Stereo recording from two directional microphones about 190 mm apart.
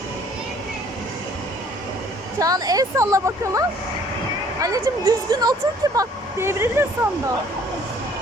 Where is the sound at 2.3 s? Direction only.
20° right (ahead or behind).